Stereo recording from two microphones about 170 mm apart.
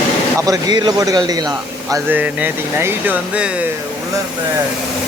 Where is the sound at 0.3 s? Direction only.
20° right (ahead or behind).